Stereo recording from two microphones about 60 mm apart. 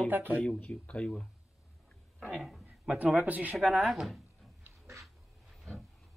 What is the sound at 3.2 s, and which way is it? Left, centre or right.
Speech, right.